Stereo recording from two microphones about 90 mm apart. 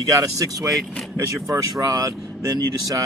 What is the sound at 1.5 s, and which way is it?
Speech, 40° right (ahead or behind).